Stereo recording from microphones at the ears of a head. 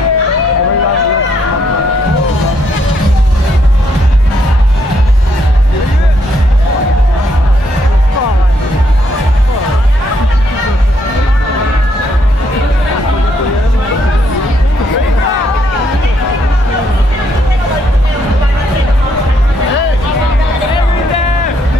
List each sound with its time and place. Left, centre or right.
0.0 s a sound: left
14.8 s music: left
19.6 s music: left